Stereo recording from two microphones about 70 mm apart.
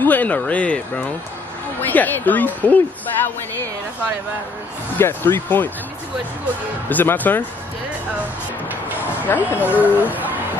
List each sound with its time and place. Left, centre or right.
0.0 s speech: left
4.9 s speech: left
6.9 s speech: left
9.3 s speech: left
9.7 s speech: right